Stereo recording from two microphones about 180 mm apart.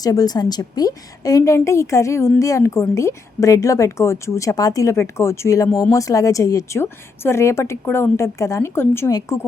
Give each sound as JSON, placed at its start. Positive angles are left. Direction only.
{"t": 0.0, "sound": "a woman's voice", "side_deg": 20}